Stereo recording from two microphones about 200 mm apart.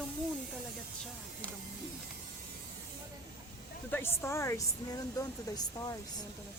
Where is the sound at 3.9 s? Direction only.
10° left (ahead or behind).